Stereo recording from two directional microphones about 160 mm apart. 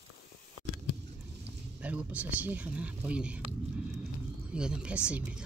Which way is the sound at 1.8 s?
10° right (ahead or behind).